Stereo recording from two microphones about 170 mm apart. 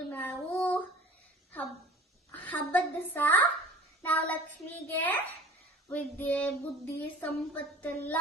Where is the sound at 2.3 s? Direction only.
10° left (ahead or behind).